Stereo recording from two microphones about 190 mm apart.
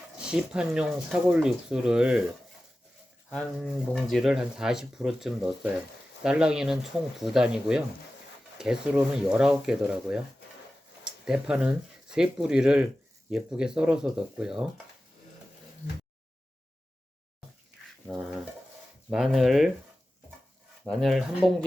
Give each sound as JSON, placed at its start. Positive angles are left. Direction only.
{"t": 0.3, "sound": "speech", "side_deg": -5}
{"t": 19.1, "sound": "speech", "side_deg": 0}
{"t": 20.8, "sound": "speech", "side_deg": 0}